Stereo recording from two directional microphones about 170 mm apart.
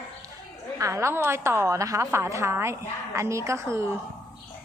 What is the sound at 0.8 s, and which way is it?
A woman's voice, 15° right (ahead or behind).